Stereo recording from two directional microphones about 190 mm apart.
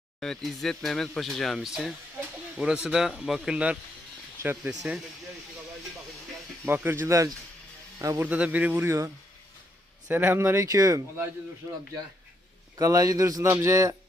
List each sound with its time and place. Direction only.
0.2 s speech: centre (ahead or behind)
6.7 s speech: 10° right (ahead or behind)
12.7 s speech: 20° right (ahead or behind)